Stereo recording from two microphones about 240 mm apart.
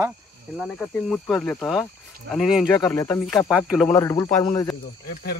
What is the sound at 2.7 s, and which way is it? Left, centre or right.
Speech, centre.